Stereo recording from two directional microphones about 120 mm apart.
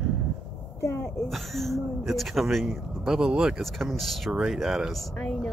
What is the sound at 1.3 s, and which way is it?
Speech, centre (ahead or behind).